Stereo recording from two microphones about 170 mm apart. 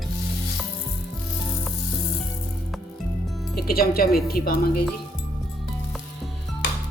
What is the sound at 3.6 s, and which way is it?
Speech, 65° left (ahead or behind).